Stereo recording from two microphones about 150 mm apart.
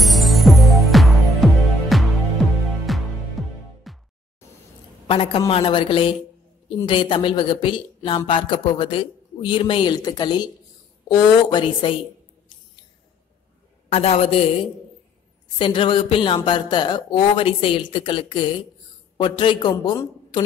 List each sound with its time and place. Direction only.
0.0 s music: centre (ahead or behind)
5.0 s a woman's voice: 40° left (ahead or behind)
13.9 s a man's voice: 40° left (ahead or behind)